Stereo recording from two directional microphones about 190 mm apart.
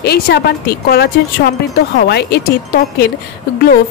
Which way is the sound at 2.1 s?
60° left (ahead or behind).